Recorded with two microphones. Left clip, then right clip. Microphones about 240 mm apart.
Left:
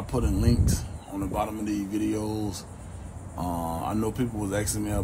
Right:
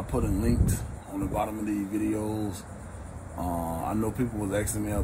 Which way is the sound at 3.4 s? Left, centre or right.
Centre.